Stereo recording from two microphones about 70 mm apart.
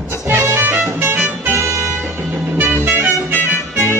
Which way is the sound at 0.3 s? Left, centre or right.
Right.